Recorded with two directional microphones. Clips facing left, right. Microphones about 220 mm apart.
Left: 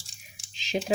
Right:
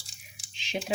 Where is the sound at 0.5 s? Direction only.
40° left (ahead or behind).